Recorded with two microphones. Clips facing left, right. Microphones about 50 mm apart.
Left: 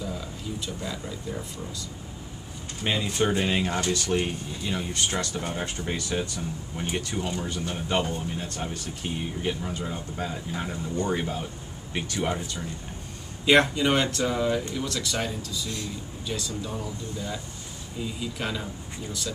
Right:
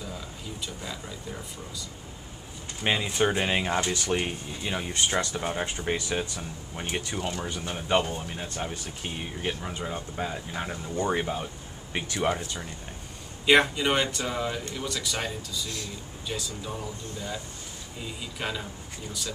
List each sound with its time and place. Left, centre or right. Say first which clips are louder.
0.0 s a sound: left 4 dB; centre
2.8 s speech: right 1 dB; centre
7.2 s speech: left 2 dB; centre
7.4 s speech: left 1 dB; centre
13.5 s speech: left 1 dB; centre
18.0 s speech: left 2 dB; centre